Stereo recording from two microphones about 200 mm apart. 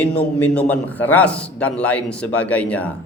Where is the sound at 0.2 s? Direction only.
5° left (ahead or behind).